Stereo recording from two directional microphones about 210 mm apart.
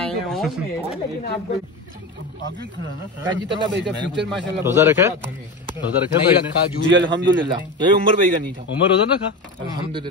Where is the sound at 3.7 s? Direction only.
55° right (ahead or behind).